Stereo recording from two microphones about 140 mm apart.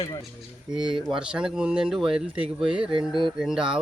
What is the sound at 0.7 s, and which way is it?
Speech, 35° right (ahead or behind).